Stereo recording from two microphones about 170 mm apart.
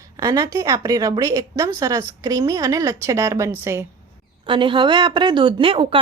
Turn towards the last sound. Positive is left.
turn(degrees=-30)  # may be behind; listen again after turning